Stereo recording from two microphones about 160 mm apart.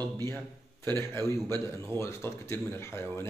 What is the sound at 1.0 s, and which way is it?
A man's voice, 15° left (ahead or behind).